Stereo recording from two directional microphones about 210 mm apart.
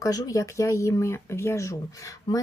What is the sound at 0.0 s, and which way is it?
Speech, 15° left (ahead or behind).